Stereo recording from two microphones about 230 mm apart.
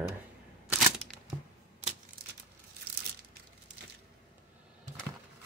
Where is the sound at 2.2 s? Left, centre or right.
Right.